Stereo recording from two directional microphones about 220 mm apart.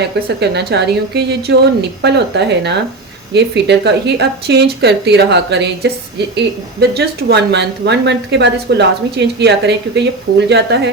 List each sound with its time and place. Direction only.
0.3 s a woman's voice: 50° right (ahead or behind)